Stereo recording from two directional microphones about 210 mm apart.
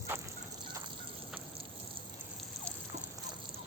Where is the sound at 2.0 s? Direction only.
25° right (ahead or behind).